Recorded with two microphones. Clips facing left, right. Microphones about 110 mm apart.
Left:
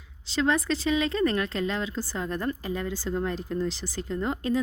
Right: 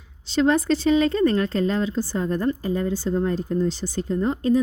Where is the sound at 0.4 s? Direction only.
30° right (ahead or behind).